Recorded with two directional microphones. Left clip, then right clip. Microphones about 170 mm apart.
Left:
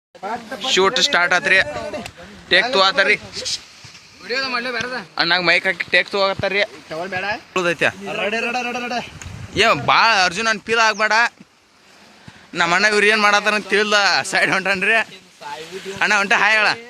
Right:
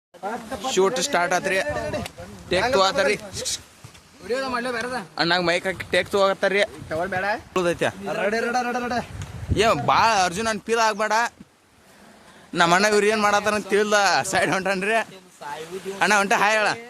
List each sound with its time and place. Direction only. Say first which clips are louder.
0.7 s a man's voice: left 6 dB; 10° right (ahead or behind)
1.7 s a man's voice: even; 5° left (ahead or behind)
2.5 s a man's voice: left 5 dB; 15° right (ahead or behind)
4.3 s speech: left 3 dB; 40° right (ahead or behind)
4.8 s speech: left 3 dB; 20° right (ahead or behind)
5.1 s a man's voice: left 5 dB; 10° right (ahead or behind)
5.7 s speech: left 4 dB; 20° right (ahead or behind)
6.9 s a man's voice: left 1 dB; 10° right (ahead or behind)
7.5 s a man's voice: left 7 dB; 5° right (ahead or behind)
12.5 s a man's voice: left 2 dB; 20° right (ahead or behind)